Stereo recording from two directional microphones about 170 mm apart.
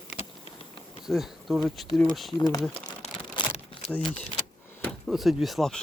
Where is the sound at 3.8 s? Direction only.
5° left (ahead or behind).